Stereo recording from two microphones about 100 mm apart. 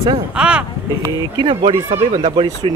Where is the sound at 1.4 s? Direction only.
50° right (ahead or behind).